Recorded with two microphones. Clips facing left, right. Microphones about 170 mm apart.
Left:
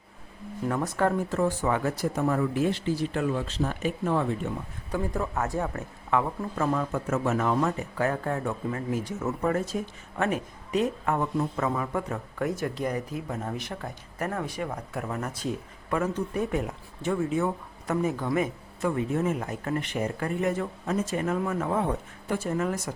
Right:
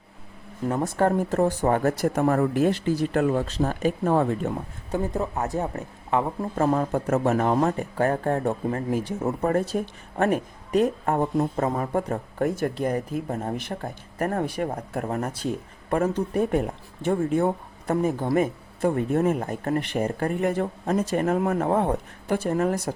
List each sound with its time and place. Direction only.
0.7 s speech: 30° right (ahead or behind); by 4.5 s 45° right (ahead or behind)
4.9 s speech: 25° right (ahead or behind)
6.6 s speech: 40° right (ahead or behind)
9.0 s speech: 30° right (ahead or behind)
10.2 s speech: 50° right (ahead or behind); by 12.2 s 35° right (ahead or behind)
12.4 s speech: 50° right (ahead or behind)
13.7 s speech: 50° right (ahead or behind)
14.4 s speech: 60° right (ahead or behind)
15.0 s speech: 35° right (ahead or behind)
17.4 s speech: 35° right (ahead or behind)
20.8 s speech: 35° right (ahead or behind)
21.2 s speech: 50° right (ahead or behind)